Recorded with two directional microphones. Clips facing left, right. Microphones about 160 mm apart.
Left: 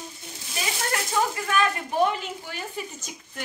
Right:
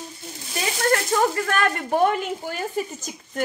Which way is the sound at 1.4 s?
60° right (ahead or behind).